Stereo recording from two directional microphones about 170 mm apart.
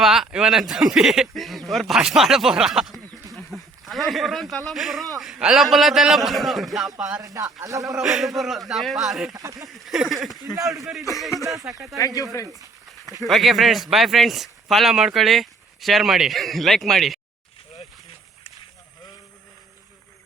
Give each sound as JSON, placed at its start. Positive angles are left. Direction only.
{"t": 0.0, "sound": "speech", "side_deg": -5}
{"t": 7.6, "sound": "speech", "side_deg": -20}
{"t": 7.9, "sound": "speech", "side_deg": 0}
{"t": 9.3, "sound": "speech", "side_deg": -20}
{"t": 9.6, "sound": "speech", "side_deg": 0}
{"t": 11.1, "sound": "speech", "side_deg": 20}
{"t": 11.4, "sound": "speech", "side_deg": -20}
{"t": 11.9, "sound": "speech", "side_deg": 20}
{"t": 13.2, "sound": "speech", "side_deg": 0}